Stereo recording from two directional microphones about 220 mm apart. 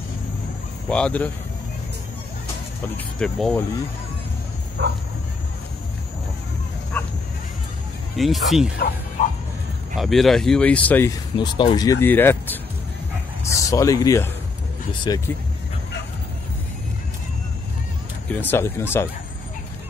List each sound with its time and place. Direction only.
0.8 s speech: 5° left (ahead or behind)
3.2 s speech: 5° left (ahead or behind)
4.8 s speech: 50° right (ahead or behind)
6.9 s bow-wow: 10° left (ahead or behind)
8.2 s speech: centre (ahead or behind)
8.7 s speech: 45° left (ahead or behind)
9.9 s speech: centre (ahead or behind)
11.3 s speech: 20° left (ahead or behind)
13.6 s speech: 15° left (ahead or behind)
18.3 s speech: 10° left (ahead or behind)